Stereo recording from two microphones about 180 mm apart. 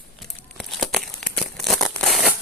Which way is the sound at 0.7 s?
Centre (ahead or behind).